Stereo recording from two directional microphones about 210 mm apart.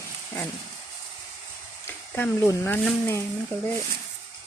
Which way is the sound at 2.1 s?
10° left (ahead or behind).